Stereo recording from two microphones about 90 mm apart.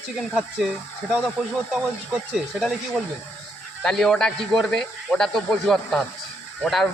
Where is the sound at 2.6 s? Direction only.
Centre (ahead or behind).